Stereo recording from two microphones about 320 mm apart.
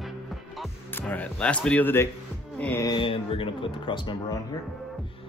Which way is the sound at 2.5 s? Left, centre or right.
Centre.